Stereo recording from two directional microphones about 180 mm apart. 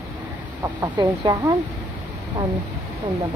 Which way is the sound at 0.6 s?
20° right (ahead or behind).